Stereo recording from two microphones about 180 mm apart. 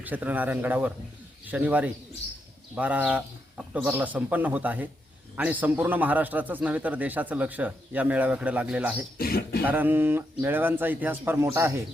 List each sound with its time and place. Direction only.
0.0 s speech: 10° right (ahead or behind)
9.1 s speech: 55° left (ahead or behind)
9.6 s speech: 10° right (ahead or behind)